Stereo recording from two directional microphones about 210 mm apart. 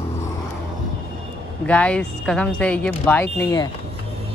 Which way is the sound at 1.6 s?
5° left (ahead or behind).